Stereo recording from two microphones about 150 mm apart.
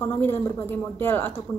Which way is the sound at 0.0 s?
15° left (ahead or behind).